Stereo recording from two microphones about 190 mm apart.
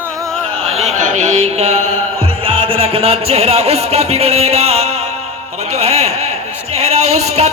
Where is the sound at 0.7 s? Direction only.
35° right (ahead or behind).